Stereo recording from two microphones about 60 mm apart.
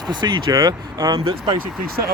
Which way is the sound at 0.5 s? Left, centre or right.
Right.